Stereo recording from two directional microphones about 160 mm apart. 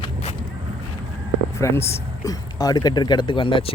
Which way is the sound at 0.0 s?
40° left (ahead or behind).